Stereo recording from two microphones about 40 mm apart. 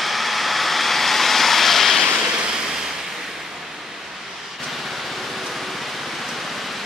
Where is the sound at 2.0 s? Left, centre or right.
Right.